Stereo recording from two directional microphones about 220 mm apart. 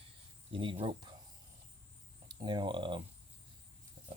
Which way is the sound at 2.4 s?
20° right (ahead or behind).